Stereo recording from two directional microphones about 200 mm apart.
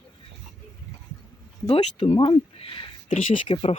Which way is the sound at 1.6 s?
30° left (ahead or behind).